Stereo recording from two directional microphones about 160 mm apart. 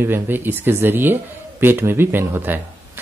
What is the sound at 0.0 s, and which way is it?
Speech, 15° right (ahead or behind).